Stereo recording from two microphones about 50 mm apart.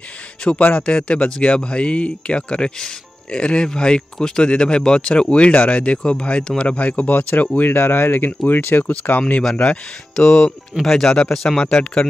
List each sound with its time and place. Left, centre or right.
0.6 s speech: left
9.6 s speech: centre